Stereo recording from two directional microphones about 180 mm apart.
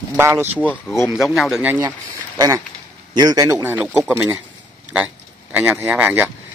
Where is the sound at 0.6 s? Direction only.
10° left (ahead or behind).